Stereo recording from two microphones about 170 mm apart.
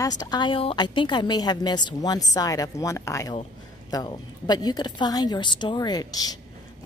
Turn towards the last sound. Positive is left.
turn(degrees=20)  # may be behind; listen again after turning